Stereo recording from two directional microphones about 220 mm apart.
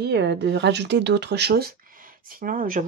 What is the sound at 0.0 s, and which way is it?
Speech, 50° right (ahead or behind).